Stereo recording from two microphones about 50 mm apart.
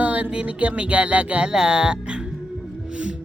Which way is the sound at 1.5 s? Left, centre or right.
Centre.